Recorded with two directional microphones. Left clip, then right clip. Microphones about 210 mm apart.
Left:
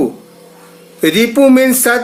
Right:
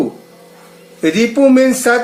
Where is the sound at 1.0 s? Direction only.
55° left (ahead or behind).